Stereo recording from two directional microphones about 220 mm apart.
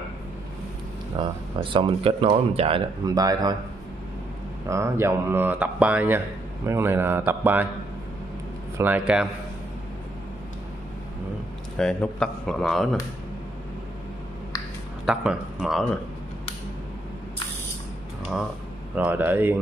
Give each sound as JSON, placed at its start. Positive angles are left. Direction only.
{"t": 1.2, "sound": "speech", "side_deg": -20}
{"t": 4.6, "sound": "speech", "side_deg": -15}
{"t": 8.7, "sound": "a man's voice", "side_deg": -10}
{"t": 11.8, "sound": "a man's voice", "side_deg": 5}
{"t": 15.0, "sound": "a man's voice", "side_deg": -5}
{"t": 18.9, "sound": "speech", "side_deg": -5}